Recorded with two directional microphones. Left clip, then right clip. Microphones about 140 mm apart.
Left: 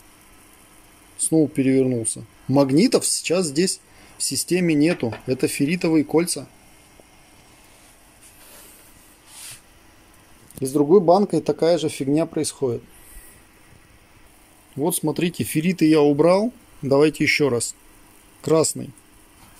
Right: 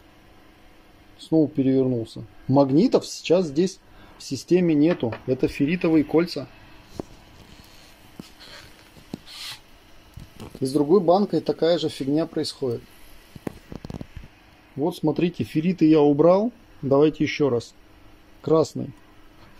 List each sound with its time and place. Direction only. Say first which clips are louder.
1.3 s speech: left 2 dB; 15° left (ahead or behind)
4.5 s speech: right 1 dB; 10° left (ahead or behind)
10.6 s speech: left 3 dB; 35° left (ahead or behind)
11.1 s speech: left 3 dB; 45° left (ahead or behind)
14.8 s a man's voice: left 1 dB; 15° left (ahead or behind)